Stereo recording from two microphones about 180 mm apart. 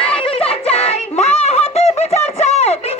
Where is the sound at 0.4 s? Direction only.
35° left (ahead or behind).